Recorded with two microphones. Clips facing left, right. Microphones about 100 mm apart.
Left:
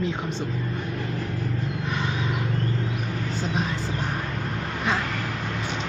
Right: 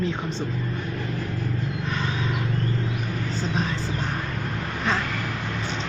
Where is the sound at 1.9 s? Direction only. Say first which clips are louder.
Even; 15° left (ahead or behind).